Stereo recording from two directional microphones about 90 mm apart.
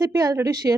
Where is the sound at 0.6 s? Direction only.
25° right (ahead or behind).